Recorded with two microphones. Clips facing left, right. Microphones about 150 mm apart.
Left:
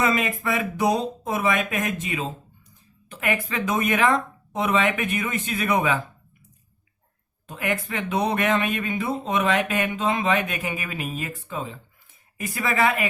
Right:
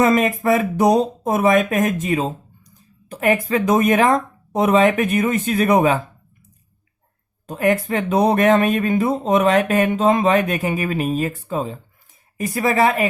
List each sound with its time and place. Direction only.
0.0 s speech: 45° right (ahead or behind)
7.4 s speech: 40° right (ahead or behind)